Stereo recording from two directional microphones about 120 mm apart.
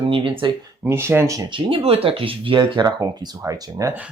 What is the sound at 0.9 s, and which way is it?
Speech, 20° right (ahead or behind).